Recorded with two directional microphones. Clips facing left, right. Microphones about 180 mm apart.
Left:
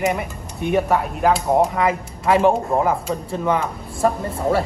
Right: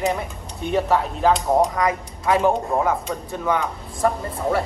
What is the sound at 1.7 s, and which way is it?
Speech, 25° left (ahead or behind).